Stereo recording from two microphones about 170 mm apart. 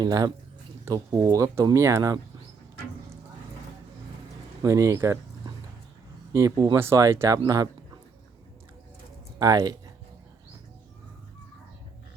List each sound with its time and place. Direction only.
0.0 s speech: 20° right (ahead or behind)
4.6 s speech: 20° right (ahead or behind)
6.3 s speech: 20° right (ahead or behind)
9.4 s speech: 20° right (ahead or behind)